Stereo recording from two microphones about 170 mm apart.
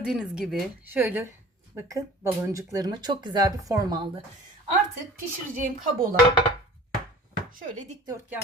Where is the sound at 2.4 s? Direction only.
20° right (ahead or behind).